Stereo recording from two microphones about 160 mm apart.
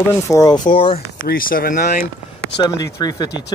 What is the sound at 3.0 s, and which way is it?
Speech, 25° left (ahead or behind).